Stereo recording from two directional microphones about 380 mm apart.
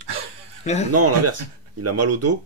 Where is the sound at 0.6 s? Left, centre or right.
Centre.